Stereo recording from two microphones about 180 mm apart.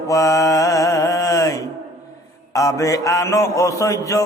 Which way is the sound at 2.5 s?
20° left (ahead or behind).